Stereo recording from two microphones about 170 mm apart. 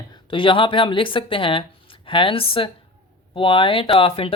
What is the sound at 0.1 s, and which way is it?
Speech, 30° left (ahead or behind).